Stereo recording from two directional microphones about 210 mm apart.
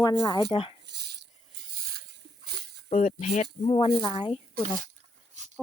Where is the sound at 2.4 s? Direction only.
50° right (ahead or behind).